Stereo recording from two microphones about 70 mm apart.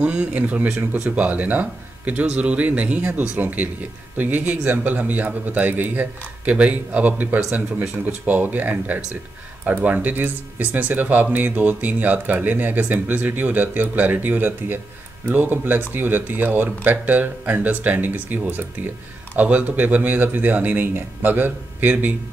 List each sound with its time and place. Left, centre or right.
0.0 s speech: centre
0.7 s speech: right
1.1 s speech: right